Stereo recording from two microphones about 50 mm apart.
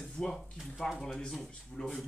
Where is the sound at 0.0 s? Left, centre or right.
Centre.